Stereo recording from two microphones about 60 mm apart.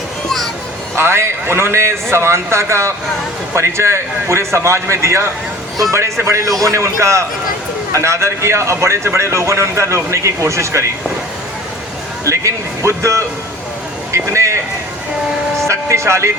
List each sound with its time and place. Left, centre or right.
0.3 s children playing: centre
0.9 s speech: right
12.2 s speech: right
14.3 s a sound: right
15.6 s speech: right